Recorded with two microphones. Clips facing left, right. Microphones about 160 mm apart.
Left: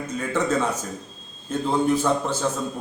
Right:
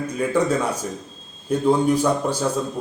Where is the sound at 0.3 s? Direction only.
10° right (ahead or behind).